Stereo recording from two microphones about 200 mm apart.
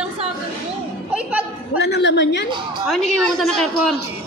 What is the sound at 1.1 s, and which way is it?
Music, 5° right (ahead or behind).